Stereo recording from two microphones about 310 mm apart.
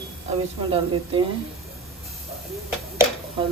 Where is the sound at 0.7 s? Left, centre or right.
Centre.